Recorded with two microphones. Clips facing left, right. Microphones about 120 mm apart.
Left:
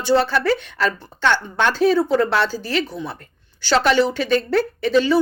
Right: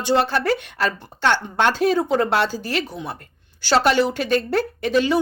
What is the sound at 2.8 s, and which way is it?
Speech, 15° right (ahead or behind).